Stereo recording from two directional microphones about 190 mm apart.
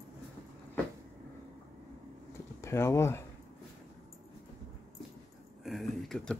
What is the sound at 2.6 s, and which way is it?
Speech, 15° left (ahead or behind).